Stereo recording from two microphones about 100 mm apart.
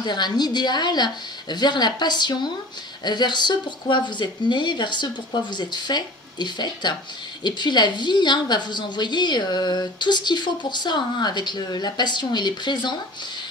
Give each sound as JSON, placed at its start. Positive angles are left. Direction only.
{"t": 0.0, "sound": "a woman's voice", "side_deg": 45}